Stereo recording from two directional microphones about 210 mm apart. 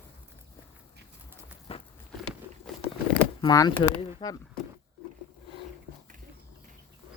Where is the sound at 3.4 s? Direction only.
20° left (ahead or behind).